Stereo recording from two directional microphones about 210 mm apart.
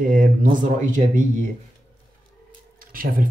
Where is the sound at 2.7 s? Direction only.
40° right (ahead or behind).